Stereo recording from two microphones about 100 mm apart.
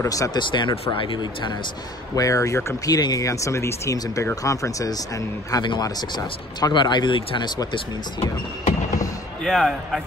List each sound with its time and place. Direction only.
0.0 s speech: 35° left (ahead or behind)
0.4 s speech: 50° left (ahead or behind)
2.1 s speech: 35° left (ahead or behind); by 7.6 s 50° left (ahead or behind)
9.4 s speech: 5° left (ahead or behind)